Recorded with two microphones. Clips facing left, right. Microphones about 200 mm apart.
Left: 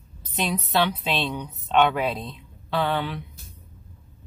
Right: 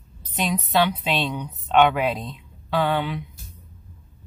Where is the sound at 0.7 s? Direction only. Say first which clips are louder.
Right 2 dB; 10° right (ahead or behind).